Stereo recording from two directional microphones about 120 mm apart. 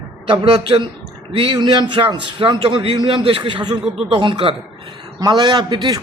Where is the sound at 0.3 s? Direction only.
50° right (ahead or behind).